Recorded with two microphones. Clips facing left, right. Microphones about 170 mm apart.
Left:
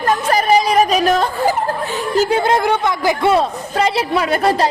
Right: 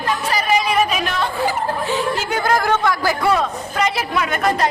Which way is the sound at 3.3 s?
30° left (ahead or behind).